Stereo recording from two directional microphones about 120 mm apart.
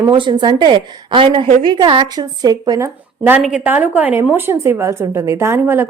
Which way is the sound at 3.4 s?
5° right (ahead or behind).